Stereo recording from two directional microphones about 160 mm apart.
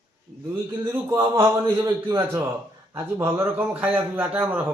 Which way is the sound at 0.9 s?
20° right (ahead or behind).